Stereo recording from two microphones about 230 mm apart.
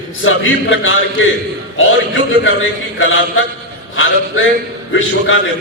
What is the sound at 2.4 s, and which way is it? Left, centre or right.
A man's voice, left.